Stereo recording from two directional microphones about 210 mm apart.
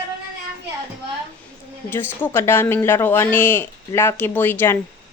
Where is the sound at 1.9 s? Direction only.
10° left (ahead or behind).